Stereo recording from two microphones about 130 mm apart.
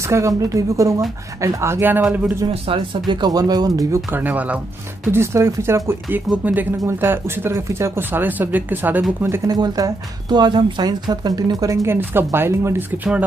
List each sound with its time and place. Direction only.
0.1 s a woman's voice: 25° right (ahead or behind)
2.5 s speech: 45° right (ahead or behind); by 4.0 s 30° right (ahead or behind)
4.1 s a woman's voice: 15° right (ahead or behind)
9.6 s a woman's voice: 30° right (ahead or behind); by 13.2 s 15° right (ahead or behind)